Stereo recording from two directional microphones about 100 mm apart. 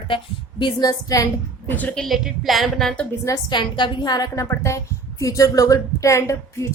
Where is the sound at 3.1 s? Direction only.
30° left (ahead or behind).